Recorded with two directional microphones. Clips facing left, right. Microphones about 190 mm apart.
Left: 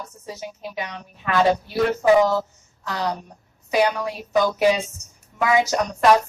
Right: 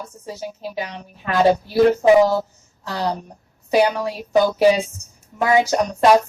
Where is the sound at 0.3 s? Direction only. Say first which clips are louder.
Right 4 dB; 30° right (ahead or behind).